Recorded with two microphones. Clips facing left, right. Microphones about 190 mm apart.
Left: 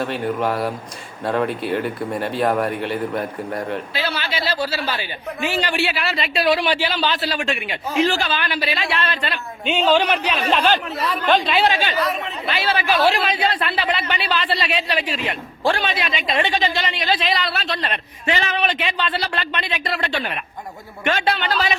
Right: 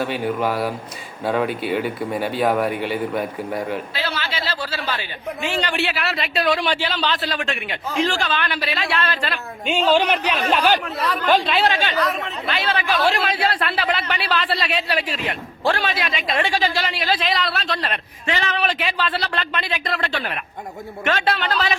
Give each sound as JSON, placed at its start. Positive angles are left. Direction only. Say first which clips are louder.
{"t": 0.0, "sound": "a man's voice", "louder": "even", "side_deg": 0}
{"t": 4.1, "sound": "a man's voice", "louder": "left 2 dB", "side_deg": 15}
{"t": 6.5, "sound": "a man's voice", "louder": "left 3 dB", "side_deg": 10}
{"t": 10.8, "sound": "a man's voice", "louder": "even", "side_deg": 0}
{"t": 13.6, "sound": "a man's voice", "louder": "even", "side_deg": 5}
{"t": 18.3, "sound": "speech", "louder": "left 2 dB", "side_deg": 20}
{"t": 18.7, "sound": "a man's voice", "louder": "even", "side_deg": -5}